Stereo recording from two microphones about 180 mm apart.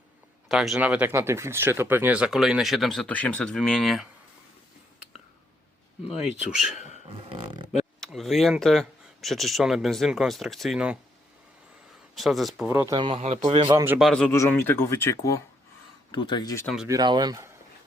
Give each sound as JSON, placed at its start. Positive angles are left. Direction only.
{"t": 0.4, "sound": "speech", "side_deg": 0}
{"t": 6.1, "sound": "speech", "side_deg": 0}
{"t": 6.7, "sound": "dog", "side_deg": 40}
{"t": 7.3, "sound": "speech", "side_deg": -25}
{"t": 8.0, "sound": "speech", "side_deg": 0}
{"t": 12.1, "sound": "speech", "side_deg": 0}
{"t": 12.6, "sound": "speech", "side_deg": -15}
{"t": 13.7, "sound": "a man's voice", "side_deg": -15}
{"t": 14.0, "sound": "speech", "side_deg": 5}
{"t": 16.6, "sound": "speech", "side_deg": -5}
{"t": 16.9, "sound": "speech", "side_deg": -20}